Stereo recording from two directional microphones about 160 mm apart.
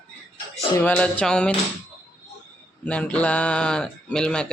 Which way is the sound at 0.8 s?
10° left (ahead or behind).